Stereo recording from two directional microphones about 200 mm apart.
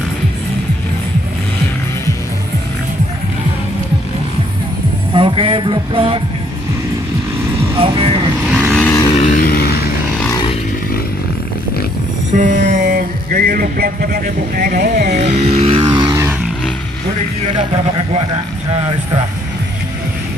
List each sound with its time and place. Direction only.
5.1 s music: 25° right (ahead or behind)
7.8 s speech: 30° right (ahead or behind)
8.5 s vehicle: centre (ahead or behind)
9.1 s vehicle: 35° left (ahead or behind)
12.3 s a sound: 40° right (ahead or behind); by 15.3 s 55° right (ahead or behind)
15.3 s vehicle: 30° right (ahead or behind); by 16.3 s 15° right (ahead or behind)